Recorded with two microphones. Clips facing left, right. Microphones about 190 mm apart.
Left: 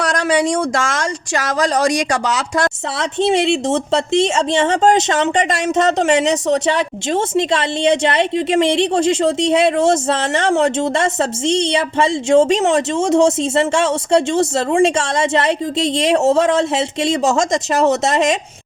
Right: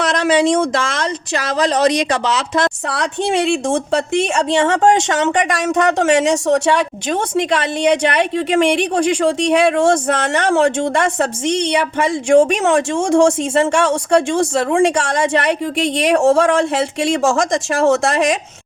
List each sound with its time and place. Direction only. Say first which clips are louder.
0.7 s speech: even; 45° left (ahead or behind)
2.9 s speech: left 5 dB; 25° left (ahead or behind)